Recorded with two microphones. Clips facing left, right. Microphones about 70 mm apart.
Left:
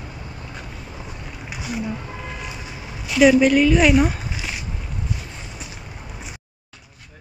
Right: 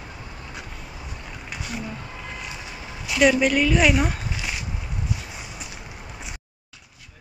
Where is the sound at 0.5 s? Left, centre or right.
Centre.